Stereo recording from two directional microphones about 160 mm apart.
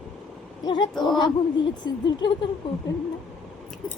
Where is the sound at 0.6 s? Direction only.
30° left (ahead or behind).